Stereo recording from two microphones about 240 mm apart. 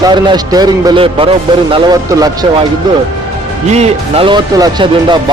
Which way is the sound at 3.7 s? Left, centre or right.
Right.